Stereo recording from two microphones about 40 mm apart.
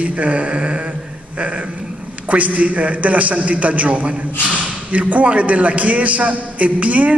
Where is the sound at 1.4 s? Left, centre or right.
Right.